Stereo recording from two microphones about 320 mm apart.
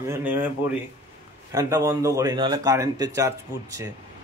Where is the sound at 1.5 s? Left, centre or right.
Centre.